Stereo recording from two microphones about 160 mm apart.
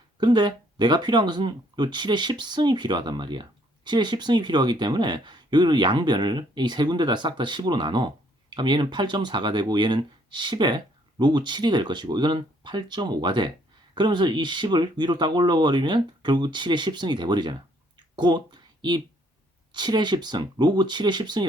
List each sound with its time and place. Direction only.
0.2 s speech: 30° right (ahead or behind)